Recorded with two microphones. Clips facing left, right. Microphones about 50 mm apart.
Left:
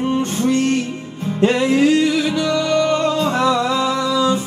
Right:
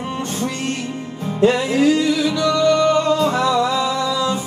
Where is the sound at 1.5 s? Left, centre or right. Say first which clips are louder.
Left 2 dB; centre.